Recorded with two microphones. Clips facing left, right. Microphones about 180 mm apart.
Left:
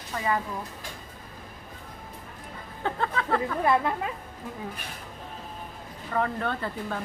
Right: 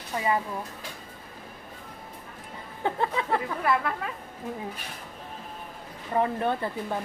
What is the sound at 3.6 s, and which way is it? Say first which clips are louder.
Speech: left 2 dB; 25° left (ahead or behind).